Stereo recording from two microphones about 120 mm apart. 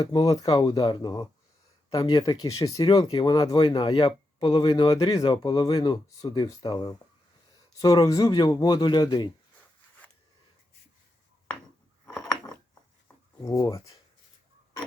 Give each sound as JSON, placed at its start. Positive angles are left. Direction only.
{"t": 0.0, "sound": "speech", "side_deg": 30}
{"t": 13.4, "sound": "speech", "side_deg": 30}